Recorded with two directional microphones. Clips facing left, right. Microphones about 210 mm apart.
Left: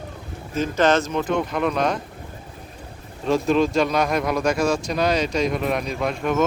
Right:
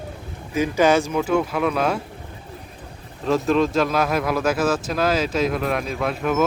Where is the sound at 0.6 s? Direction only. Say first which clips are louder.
Right 2 dB; 10° right (ahead or behind).